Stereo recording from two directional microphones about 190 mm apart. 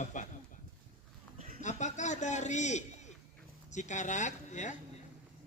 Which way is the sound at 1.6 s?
40° left (ahead or behind).